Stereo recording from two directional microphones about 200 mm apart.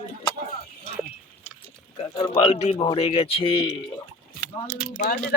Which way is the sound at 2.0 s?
20° left (ahead or behind).